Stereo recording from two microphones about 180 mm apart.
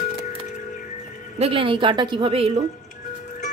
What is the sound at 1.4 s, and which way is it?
A woman's voice, 30° right (ahead or behind).